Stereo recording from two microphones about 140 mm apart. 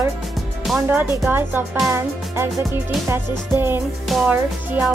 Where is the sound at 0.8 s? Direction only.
15° right (ahead or behind).